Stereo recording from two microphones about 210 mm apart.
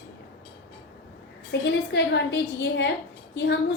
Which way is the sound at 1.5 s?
55° left (ahead or behind).